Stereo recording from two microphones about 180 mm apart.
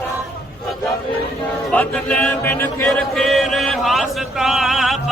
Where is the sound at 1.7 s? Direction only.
10° left (ahead or behind).